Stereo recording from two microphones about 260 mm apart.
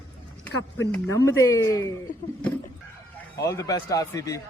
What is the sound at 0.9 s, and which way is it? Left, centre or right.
A man's voice, centre.